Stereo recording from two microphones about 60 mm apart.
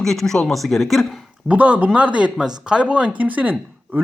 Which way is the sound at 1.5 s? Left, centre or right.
Right.